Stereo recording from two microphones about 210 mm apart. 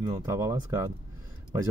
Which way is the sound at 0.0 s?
15° right (ahead or behind).